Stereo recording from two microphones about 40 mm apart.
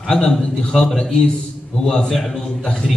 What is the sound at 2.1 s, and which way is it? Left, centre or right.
Speech, centre.